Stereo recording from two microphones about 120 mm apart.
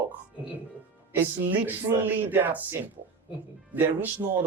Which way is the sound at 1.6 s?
15° right (ahead or behind).